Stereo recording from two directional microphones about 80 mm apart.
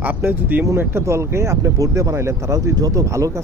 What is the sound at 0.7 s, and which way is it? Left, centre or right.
Speech, right.